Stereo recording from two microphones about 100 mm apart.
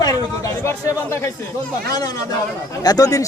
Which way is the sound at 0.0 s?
35° left (ahead or behind).